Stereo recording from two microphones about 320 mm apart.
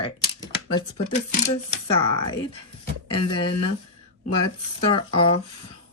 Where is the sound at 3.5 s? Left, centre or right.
Left.